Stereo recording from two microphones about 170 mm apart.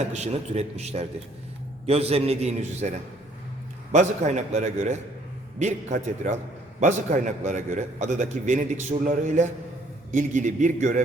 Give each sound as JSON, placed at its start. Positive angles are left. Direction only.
{"t": 0.0, "sound": "a man's voice", "side_deg": -40}